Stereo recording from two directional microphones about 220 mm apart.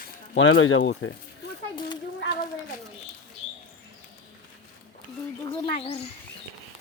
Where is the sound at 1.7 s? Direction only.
20° left (ahead or behind).